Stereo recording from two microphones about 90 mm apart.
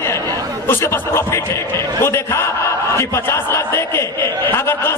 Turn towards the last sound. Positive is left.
turn(degrees=30)  # may be behind; listen again after turning